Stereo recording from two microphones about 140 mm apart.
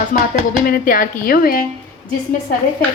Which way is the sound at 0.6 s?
90° left.